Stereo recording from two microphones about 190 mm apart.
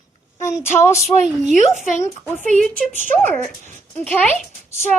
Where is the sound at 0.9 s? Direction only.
35° right (ahead or behind).